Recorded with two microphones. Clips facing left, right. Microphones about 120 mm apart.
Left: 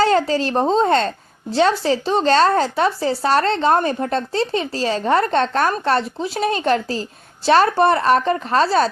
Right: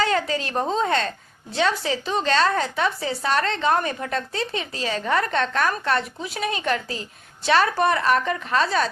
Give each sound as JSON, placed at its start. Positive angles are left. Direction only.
{"t": 0.0, "sound": "a woman's voice", "side_deg": 30}